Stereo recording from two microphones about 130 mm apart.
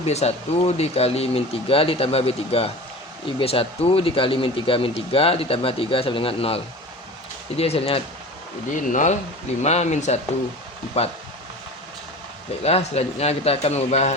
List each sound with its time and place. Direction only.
0.0 s speech: 55° left (ahead or behind)
8.7 s speech: 75° left (ahead or behind)
9.6 s a man's voice: 60° left (ahead or behind)
12.6 s a man's voice: 55° left (ahead or behind)